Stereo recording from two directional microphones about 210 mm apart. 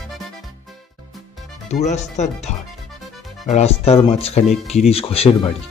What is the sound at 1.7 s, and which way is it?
Speech, 35° left (ahead or behind).